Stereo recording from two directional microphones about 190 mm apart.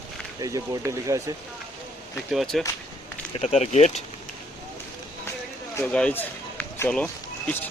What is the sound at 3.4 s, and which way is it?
Speech, 35° left (ahead or behind).